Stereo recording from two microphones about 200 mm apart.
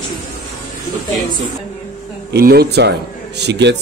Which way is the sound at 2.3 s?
50° right (ahead or behind).